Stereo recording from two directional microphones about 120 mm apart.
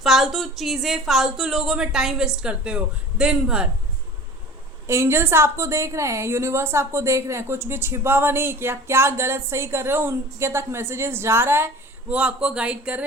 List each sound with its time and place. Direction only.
0.0 s speech: centre (ahead or behind)
4.9 s a woman's voice: 20° right (ahead or behind)